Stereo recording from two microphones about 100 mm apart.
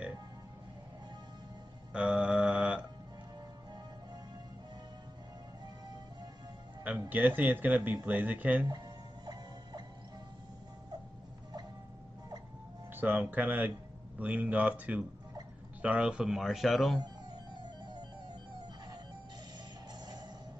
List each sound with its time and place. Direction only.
1.9 s mantra: 10° right (ahead or behind)
7.1 s speech: 15° right (ahead or behind)
8.6 s music: 40° right (ahead or behind)
12.9 s speech: 15° right (ahead or behind); by 17.0 s centre (ahead or behind)